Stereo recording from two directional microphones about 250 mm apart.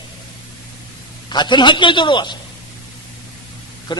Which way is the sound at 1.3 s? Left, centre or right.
Centre.